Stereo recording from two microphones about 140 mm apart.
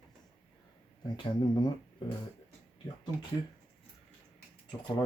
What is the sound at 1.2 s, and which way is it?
Speech, 30° left (ahead or behind).